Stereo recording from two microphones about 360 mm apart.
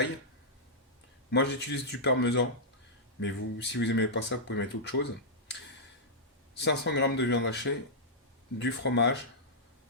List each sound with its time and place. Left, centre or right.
1.3 s speech: left
6.6 s speech: left